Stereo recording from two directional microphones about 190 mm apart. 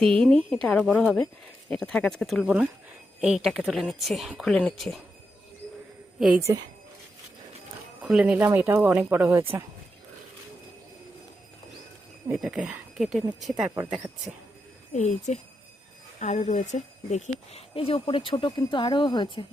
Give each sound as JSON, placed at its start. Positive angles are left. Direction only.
{"t": 0.0, "sound": "speech", "side_deg": 5}
{"t": 8.0, "sound": "speech", "side_deg": -5}
{"t": 12.3, "sound": "speech", "side_deg": -5}
{"t": 13.7, "sound": "speech", "side_deg": -10}
{"t": 14.9, "sound": "speech", "side_deg": 40}